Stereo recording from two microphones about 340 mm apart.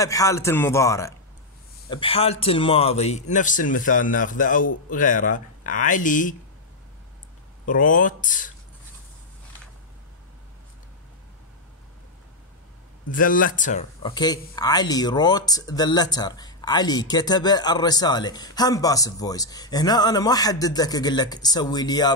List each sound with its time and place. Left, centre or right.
0.0 s a man's voice: centre
7.6 s a man's voice: left
13.1 s speech: left